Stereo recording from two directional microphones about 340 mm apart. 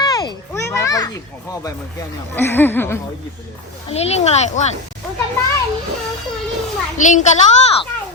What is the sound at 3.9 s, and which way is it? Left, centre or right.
Speech, centre.